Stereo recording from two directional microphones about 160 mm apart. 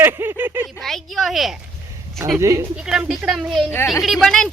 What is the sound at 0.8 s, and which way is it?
Speech, centre (ahead or behind).